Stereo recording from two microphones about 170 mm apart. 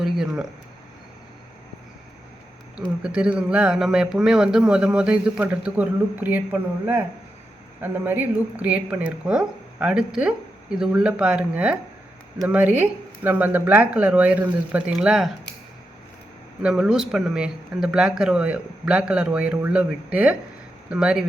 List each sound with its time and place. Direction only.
0.0 s speech: 5° right (ahead or behind)
3.0 s a man's voice: 5° right (ahead or behind)
16.6 s a man's voice: 5° right (ahead or behind)